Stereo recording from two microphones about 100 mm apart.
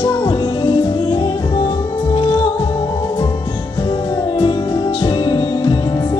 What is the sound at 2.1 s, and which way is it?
Music, 70° left (ahead or behind).